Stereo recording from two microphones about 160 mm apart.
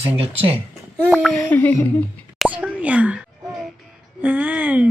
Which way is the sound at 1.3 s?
10° left (ahead or behind).